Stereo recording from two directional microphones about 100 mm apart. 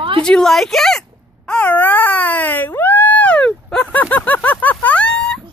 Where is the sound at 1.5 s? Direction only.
15° left (ahead or behind).